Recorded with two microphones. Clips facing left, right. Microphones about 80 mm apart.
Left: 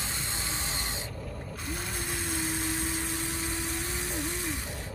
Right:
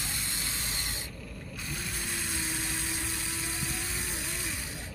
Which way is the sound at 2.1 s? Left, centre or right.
Centre.